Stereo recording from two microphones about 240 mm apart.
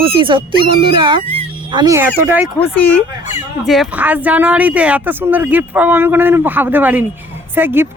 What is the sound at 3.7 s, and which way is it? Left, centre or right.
Speech, centre.